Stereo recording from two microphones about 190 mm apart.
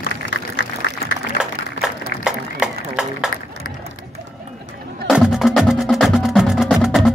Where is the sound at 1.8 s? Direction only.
70° left (ahead or behind).